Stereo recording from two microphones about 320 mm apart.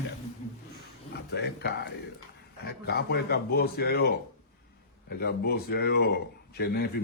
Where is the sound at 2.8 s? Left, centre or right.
Left.